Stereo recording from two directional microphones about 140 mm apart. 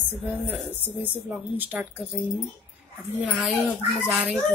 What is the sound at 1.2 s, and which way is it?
Speech, 15° right (ahead or behind).